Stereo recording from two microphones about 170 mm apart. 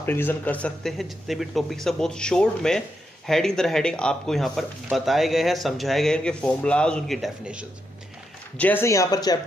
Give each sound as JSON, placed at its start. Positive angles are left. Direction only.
{"t": 0.0, "sound": "speech", "side_deg": 10}
{"t": 8.5, "sound": "speech", "side_deg": 10}